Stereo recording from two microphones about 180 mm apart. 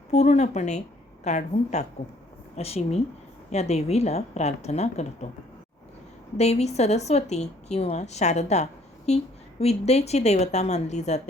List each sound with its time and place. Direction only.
0.1 s a woman's voice: 40° left (ahead or behind)
6.3 s a woman's voice: 35° left (ahead or behind)